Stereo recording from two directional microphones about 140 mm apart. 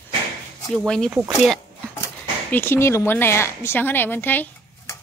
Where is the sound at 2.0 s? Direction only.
15° left (ahead or behind).